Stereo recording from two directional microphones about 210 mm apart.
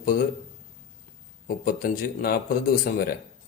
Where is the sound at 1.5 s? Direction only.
45° left (ahead or behind).